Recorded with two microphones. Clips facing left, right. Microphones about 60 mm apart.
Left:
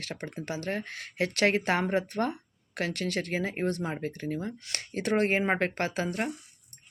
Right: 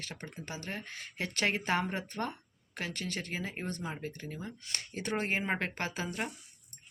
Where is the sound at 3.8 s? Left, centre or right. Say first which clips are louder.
Left 7 dB; left.